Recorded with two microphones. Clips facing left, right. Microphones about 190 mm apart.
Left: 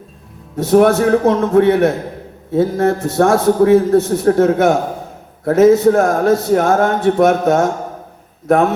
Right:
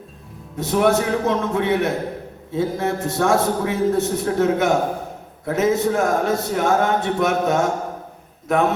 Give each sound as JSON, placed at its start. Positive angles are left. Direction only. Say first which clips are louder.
{"t": 0.5, "sound": "a man's voice", "louder": "left 7 dB", "side_deg": 50}